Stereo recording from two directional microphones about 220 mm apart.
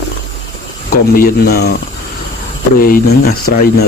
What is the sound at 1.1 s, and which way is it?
Speech, 45° left (ahead or behind).